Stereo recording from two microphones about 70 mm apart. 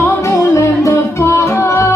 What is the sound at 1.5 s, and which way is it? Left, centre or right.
Music, left.